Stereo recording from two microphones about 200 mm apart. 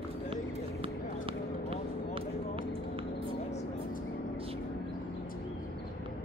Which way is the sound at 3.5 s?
35° left (ahead or behind).